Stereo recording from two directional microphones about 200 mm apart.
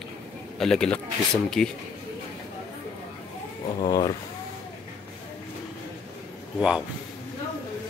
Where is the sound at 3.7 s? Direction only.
20° left (ahead or behind).